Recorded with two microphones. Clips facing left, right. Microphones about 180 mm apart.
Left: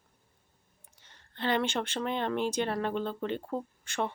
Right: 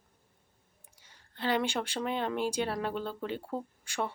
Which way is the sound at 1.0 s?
10° right (ahead or behind).